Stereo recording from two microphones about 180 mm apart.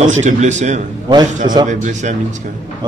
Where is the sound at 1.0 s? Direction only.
25° right (ahead or behind).